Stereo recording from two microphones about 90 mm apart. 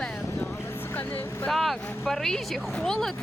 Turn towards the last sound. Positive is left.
turn(degrees=5)  # may be behind; listen again after turning